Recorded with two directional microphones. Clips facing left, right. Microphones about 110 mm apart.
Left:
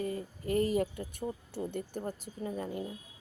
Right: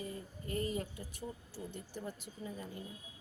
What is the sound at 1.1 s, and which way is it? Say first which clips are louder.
Speech: left 8 dB; 60° left (ahead or behind).